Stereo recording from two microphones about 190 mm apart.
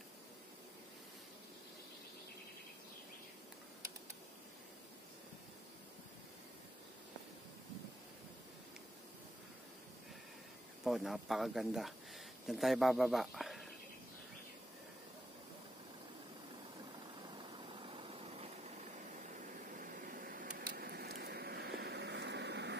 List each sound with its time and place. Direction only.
10.8 s speech: centre (ahead or behind)
17.4 s vehicle: 30° right (ahead or behind)
19.8 s a sound: 45° right (ahead or behind); by 22.8 s 65° right (ahead or behind)